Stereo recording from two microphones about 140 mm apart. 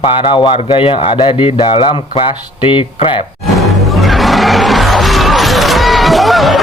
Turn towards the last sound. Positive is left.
turn(degrees=0)  # may be behind; listen again after turning